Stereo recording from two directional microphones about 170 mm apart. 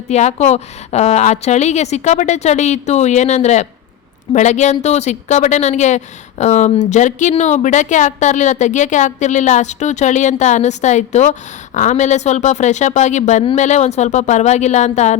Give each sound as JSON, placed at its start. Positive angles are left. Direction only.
{"t": 0.1, "sound": "a woman's voice", "side_deg": 40}